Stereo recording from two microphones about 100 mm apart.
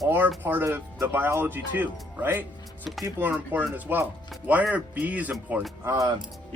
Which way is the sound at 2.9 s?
Centre (ahead or behind).